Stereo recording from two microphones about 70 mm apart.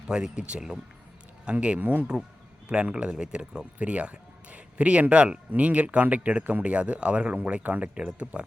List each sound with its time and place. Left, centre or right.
0.1 s speech: centre